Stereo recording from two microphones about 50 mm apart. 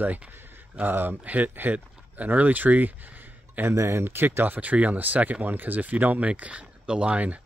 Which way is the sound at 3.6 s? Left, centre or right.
Right.